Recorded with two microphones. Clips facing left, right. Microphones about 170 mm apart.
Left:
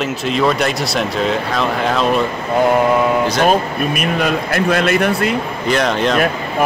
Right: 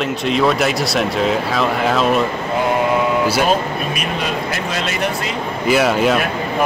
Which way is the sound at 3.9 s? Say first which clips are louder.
Left 4 dB; 55° left (ahead or behind).